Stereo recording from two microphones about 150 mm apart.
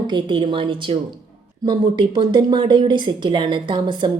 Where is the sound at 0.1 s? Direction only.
35° right (ahead or behind).